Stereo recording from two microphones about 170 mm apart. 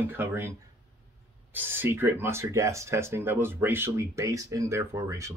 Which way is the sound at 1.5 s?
10° right (ahead or behind).